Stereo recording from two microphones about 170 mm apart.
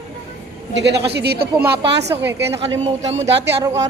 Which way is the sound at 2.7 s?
40° right (ahead or behind).